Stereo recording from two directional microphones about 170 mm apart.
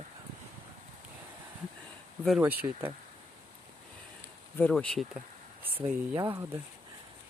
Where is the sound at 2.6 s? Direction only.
25° right (ahead or behind).